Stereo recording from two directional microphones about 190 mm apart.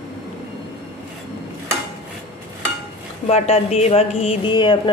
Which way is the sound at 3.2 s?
35° left (ahead or behind).